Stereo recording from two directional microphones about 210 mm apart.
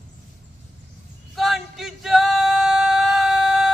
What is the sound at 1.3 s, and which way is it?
Male singing, centre (ahead or behind).